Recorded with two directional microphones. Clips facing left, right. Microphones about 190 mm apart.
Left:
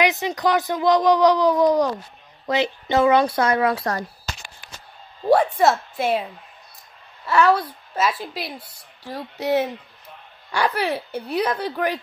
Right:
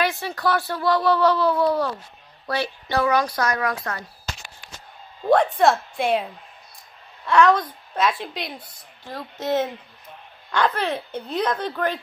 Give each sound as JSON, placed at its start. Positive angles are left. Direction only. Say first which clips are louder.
{"t": 0.0, "sound": "a woman's voice", "louder": "left 3 dB", "side_deg": 20}
{"t": 5.3, "sound": "a woman's voice", "louder": "left 1 dB", "side_deg": 5}
{"t": 7.2, "sound": "a woman's voice", "louder": "right 1 dB", "side_deg": 5}